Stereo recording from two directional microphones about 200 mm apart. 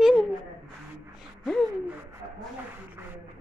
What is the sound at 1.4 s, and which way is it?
Speech, 5° left (ahead or behind).